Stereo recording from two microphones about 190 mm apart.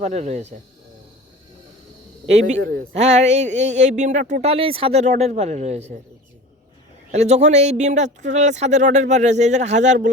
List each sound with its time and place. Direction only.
0.0 s speech: 35° right (ahead or behind)
2.2 s speech: 35° right (ahead or behind)
7.1 s speech: 35° right (ahead or behind)